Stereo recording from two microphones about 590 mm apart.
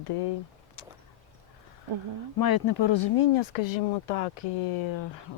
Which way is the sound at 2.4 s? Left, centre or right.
Left.